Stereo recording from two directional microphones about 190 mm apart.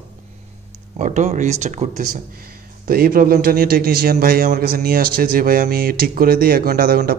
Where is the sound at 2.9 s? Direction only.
50° right (ahead or behind).